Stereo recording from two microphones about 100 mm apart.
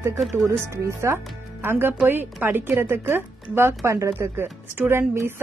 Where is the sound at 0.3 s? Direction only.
30° right (ahead or behind).